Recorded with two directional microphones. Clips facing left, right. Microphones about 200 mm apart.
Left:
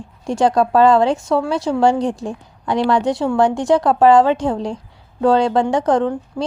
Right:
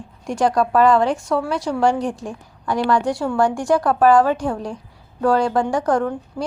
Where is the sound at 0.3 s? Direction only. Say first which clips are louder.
Left 3 dB; 25° left (ahead or behind).